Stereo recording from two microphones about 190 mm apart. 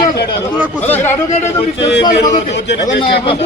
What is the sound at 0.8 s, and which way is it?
Speech, 10° left (ahead or behind).